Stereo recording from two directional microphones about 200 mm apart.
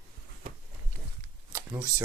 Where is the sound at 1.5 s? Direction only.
15° right (ahead or behind).